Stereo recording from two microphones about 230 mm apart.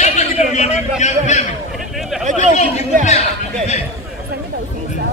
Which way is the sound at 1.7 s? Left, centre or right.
Centre.